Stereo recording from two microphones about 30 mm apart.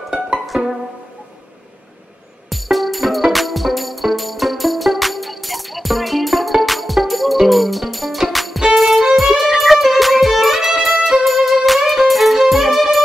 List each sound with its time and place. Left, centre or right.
0.5 s music: right
2.5 s music: centre